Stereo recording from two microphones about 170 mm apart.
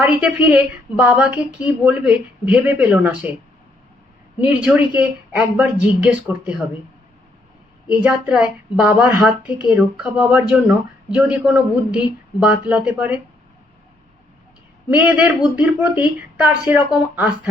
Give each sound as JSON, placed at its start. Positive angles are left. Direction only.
{"t": 0.0, "sound": "a woman's voice", "side_deg": -5}
{"t": 4.4, "sound": "a woman's voice", "side_deg": -5}
{"t": 7.9, "sound": "a woman's voice", "side_deg": -5}
{"t": 14.8, "sound": "a woman's voice", "side_deg": -10}